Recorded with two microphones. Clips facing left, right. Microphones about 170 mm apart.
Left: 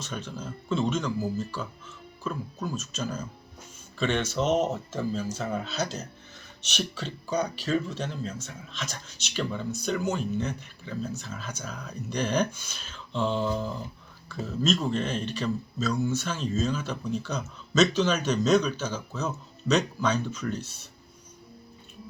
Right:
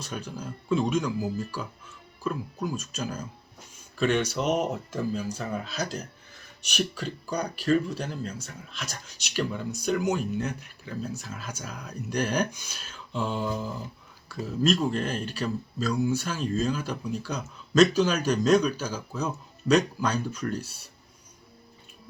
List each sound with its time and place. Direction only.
0.0 s speech: 10° right (ahead or behind)